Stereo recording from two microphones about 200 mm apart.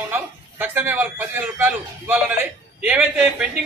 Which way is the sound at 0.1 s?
10° right (ahead or behind).